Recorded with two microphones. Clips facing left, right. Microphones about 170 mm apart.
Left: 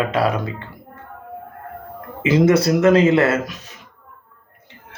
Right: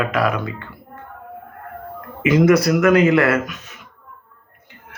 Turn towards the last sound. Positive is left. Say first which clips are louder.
# right 1 dB
turn(degrees=30)  # may be behind; listen again after turning